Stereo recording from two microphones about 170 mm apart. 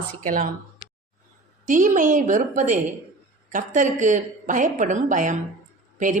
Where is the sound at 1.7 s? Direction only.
50° right (ahead or behind).